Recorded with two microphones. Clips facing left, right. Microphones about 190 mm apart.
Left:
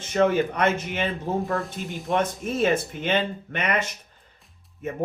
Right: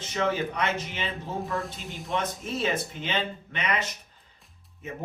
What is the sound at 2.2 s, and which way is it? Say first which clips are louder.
A man's voice: left 5 dB; 50° left (ahead or behind).